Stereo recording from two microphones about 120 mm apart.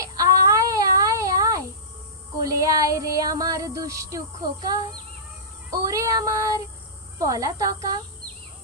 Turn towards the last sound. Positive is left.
turn(degrees=-30)  # may be behind; listen again after turning